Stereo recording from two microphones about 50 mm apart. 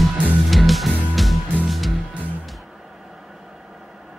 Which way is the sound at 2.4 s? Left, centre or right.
Centre.